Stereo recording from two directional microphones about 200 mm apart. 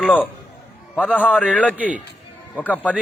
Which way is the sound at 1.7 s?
5° right (ahead or behind).